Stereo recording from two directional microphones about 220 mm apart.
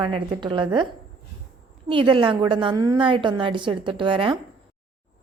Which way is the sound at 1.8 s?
25° right (ahead or behind).